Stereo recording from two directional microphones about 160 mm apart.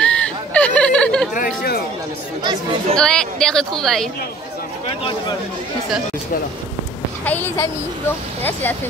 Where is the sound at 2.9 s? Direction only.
5° left (ahead or behind).